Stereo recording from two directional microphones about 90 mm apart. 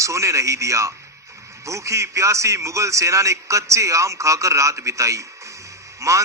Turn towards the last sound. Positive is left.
turn(degrees=-35)  # may be behind; listen again after turning